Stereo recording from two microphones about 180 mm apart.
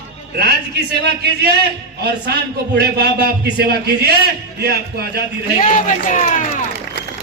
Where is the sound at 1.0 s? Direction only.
65° right (ahead or behind).